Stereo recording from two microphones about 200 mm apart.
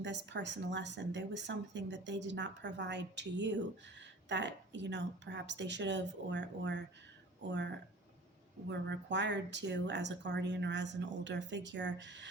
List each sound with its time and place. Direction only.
0.0 s speech: 60° right (ahead or behind)
8.7 s speech: 60° right (ahead or behind)